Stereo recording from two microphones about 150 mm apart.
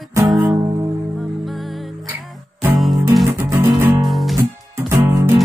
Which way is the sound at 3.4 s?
15° right (ahead or behind).